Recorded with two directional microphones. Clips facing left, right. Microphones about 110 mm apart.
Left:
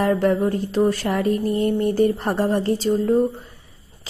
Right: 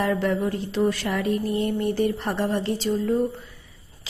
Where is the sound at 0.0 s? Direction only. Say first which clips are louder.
Left 5 dB; 45° left (ahead or behind).